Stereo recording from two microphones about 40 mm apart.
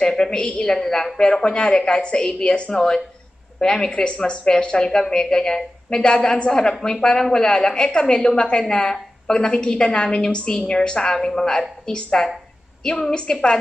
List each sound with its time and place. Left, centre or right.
0.2 s a woman's voice: centre
1.1 s a woman's voice: left
3.9 s a woman's voice: left
8.2 s speech: centre
8.5 s a woman's voice: left